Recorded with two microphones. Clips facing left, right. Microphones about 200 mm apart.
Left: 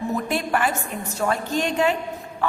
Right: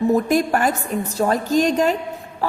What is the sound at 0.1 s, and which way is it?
A woman's voice, 40° right (ahead or behind).